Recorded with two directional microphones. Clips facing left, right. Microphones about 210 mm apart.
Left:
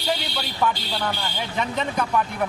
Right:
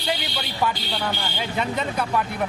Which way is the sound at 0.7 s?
10° right (ahead or behind).